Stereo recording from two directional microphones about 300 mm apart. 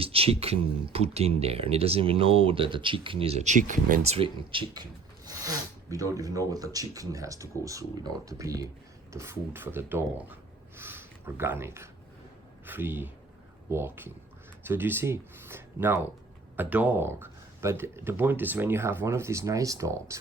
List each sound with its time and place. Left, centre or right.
0.0 s speech: centre